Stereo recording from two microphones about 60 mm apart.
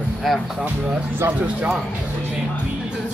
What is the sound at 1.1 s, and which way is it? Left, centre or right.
Speech, right.